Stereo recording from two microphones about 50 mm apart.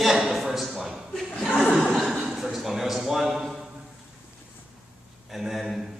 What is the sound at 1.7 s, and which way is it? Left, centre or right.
Chuckle, centre.